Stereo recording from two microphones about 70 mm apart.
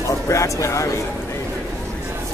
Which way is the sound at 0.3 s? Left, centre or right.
Left.